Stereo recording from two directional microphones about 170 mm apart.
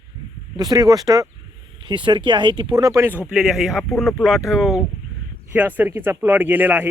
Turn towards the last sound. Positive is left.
turn(degrees=-10)  # may be behind; listen again after turning